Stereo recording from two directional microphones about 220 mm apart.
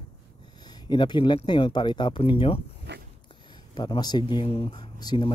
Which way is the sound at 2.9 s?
50° right (ahead or behind).